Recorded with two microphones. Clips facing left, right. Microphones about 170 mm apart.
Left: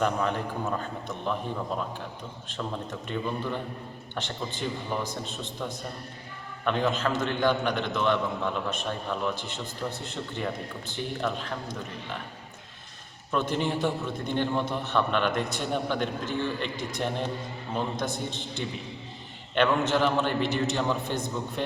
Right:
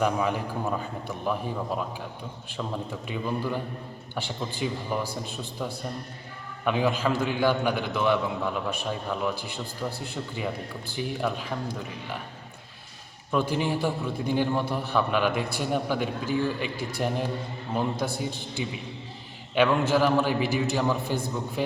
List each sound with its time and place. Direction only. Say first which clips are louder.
0.0 s a man's voice: right 1 dB; 10° right (ahead or behind)
13.3 s a man's voice: right 2 dB; 10° right (ahead or behind)
19.5 s a man's voice: right 2 dB; 5° right (ahead or behind)